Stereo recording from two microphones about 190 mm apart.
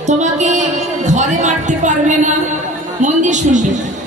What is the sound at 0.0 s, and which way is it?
Music, 40° right (ahead or behind).